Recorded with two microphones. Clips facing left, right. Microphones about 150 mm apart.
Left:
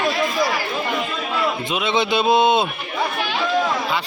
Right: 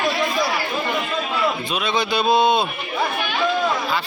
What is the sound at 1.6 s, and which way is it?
Speech, 20° left (ahead or behind).